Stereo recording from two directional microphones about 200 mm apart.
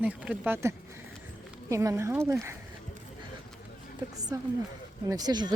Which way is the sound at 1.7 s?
15° right (ahead or behind).